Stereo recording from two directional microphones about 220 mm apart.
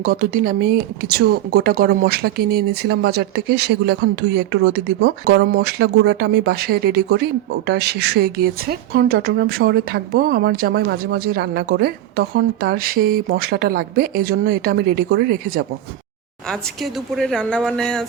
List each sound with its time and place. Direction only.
0.0 s speech: 40° right (ahead or behind)
16.5 s speech: centre (ahead or behind)